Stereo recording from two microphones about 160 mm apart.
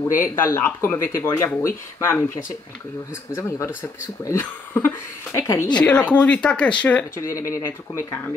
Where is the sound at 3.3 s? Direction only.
15° left (ahead or behind).